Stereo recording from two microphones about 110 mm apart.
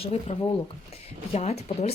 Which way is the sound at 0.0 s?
70° left (ahead or behind).